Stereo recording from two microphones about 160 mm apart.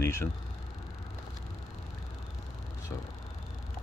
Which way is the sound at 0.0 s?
15° left (ahead or behind).